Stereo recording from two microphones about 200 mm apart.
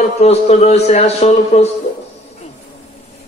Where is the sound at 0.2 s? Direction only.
30° left (ahead or behind).